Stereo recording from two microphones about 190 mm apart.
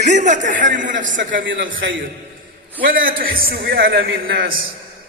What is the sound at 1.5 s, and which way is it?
Speech, 80° right.